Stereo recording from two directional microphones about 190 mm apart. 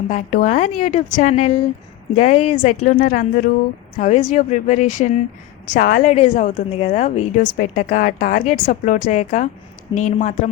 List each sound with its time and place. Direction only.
0.1 s a woman's voice: 40° left (ahead or behind)